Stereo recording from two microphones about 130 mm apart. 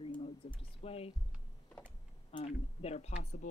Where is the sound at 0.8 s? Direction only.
50° left (ahead or behind).